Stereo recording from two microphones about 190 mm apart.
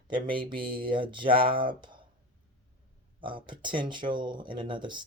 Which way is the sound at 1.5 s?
45° right (ahead or behind).